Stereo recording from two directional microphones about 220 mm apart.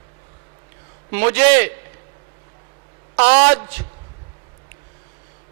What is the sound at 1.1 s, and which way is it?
Speech, 10° right (ahead or behind).